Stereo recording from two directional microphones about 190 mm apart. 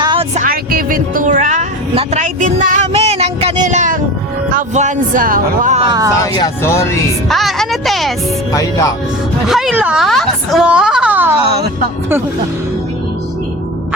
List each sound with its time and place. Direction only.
0.0 s a sound: 25° right (ahead or behind)
0.3 s music: 50° right (ahead or behind)
4.4 s speech: 40° right (ahead or behind)
5.8 s speech: 20° right (ahead or behind)
6.3 s speech: 15° left (ahead or behind)
7.3 s music: centre (ahead or behind)
8.5 s speech: 20° left (ahead or behind)
9.5 s a woman's voice: centre (ahead or behind)